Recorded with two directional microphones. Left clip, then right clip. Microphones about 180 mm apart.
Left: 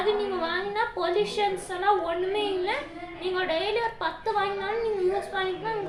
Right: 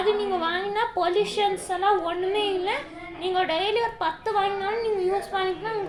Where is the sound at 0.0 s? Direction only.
35° right (ahead or behind).